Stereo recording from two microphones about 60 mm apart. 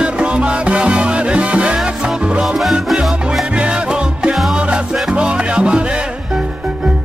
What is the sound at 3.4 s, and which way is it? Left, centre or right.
Music, centre.